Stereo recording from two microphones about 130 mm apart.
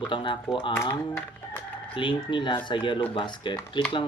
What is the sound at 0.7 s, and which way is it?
Speech, 20° left (ahead or behind).